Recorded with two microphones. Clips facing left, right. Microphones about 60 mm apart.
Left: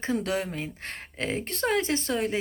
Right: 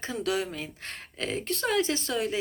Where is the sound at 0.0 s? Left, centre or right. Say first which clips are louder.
Left 2 dB; left.